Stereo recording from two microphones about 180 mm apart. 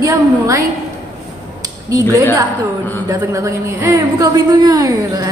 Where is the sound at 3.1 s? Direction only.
15° right (ahead or behind).